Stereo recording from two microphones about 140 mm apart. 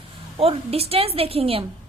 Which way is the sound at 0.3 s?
45° right (ahead or behind).